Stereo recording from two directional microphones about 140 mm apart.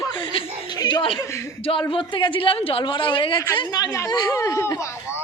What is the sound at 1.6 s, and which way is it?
Speech, 40° left (ahead or behind).